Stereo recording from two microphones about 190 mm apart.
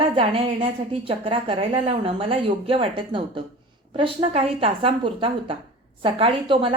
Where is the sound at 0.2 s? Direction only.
30° right (ahead or behind).